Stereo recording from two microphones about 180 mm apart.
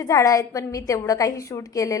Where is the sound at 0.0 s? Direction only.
15° left (ahead or behind).